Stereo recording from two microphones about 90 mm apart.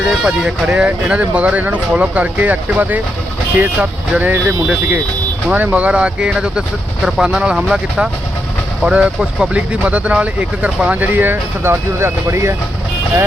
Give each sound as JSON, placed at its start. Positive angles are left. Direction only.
{"t": 0.1, "sound": "speech", "side_deg": -5}